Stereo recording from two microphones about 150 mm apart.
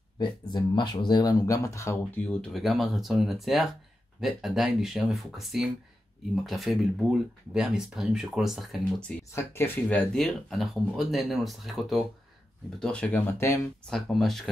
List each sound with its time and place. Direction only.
0.2 s speech: 30° left (ahead or behind)
2.2 s speech: 5° left (ahead or behind)
9.3 s speech: 15° left (ahead or behind)
13.8 s speech: 5° left (ahead or behind)